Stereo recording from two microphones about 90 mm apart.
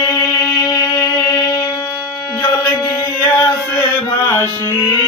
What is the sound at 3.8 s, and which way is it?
Music, 30° left (ahead or behind).